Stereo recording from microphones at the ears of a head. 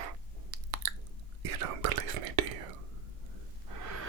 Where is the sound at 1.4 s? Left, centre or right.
Right.